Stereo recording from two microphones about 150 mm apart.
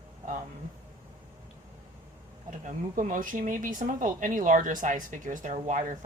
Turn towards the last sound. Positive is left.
turn(degrees=-60)  # may be behind; listen again after turning